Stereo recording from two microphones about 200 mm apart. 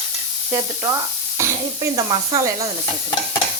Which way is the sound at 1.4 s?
15° right (ahead or behind).